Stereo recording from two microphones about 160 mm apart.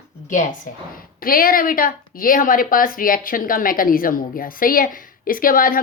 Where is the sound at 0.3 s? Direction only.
55° left (ahead or behind).